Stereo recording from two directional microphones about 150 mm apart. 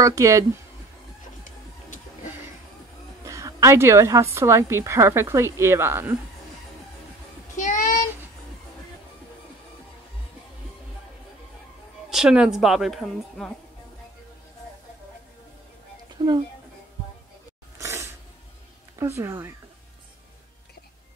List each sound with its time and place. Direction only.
0.0 s speech: 20° right (ahead or behind)
3.3 s a woman's voice: 20° right (ahead or behind)
7.5 s child singing: 60° left (ahead or behind)
12.1 s a woman's voice: 5° right (ahead or behind)
16.2 s speech: 30° right (ahead or behind)
17.7 s a sound: 20° right (ahead or behind)
18.9 s a woman's voice: 20° right (ahead or behind)